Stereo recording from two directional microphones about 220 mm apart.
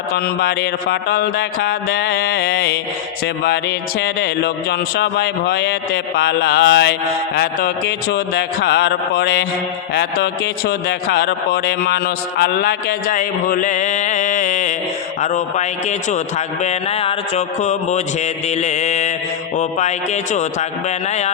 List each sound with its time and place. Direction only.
0.1 s a man's voice: 45° left (ahead or behind)
15.2 s mantra: 30° left (ahead or behind)
20.3 s mantra: 30° left (ahead or behind)